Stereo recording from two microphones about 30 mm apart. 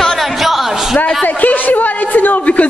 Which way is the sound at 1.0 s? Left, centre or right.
Left.